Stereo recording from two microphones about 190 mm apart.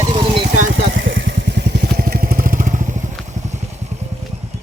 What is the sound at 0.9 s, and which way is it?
Motorcycle, 75° right (ahead or behind).